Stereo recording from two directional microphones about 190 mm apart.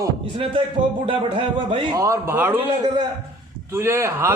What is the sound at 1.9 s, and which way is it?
Speech, 15° right (ahead or behind).